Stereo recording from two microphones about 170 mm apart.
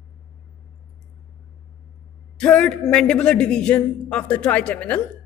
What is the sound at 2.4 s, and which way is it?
A man's voice, 5° left (ahead or behind).